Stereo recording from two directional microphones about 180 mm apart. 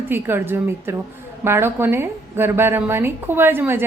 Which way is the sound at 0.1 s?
10° right (ahead or behind).